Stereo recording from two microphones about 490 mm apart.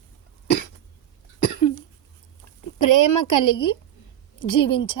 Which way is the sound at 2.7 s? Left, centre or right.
Left.